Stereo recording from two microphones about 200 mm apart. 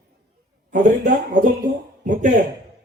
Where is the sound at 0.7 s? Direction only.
40° right (ahead or behind).